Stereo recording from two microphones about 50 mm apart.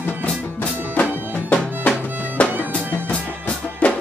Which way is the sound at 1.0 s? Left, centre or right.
Left.